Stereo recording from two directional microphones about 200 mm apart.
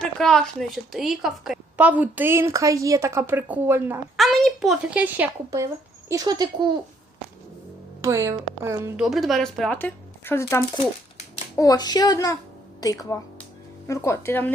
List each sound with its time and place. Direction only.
0.0 s a woman's voice: 5° left (ahead or behind)
4.2 s speech: centre (ahead or behind); by 6.7 s 20° right (ahead or behind)
8.0 s a woman's voice: 15° right (ahead or behind)
9.0 s speech: centre (ahead or behind)